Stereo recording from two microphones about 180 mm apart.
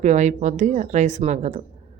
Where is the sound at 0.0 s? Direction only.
40° right (ahead or behind).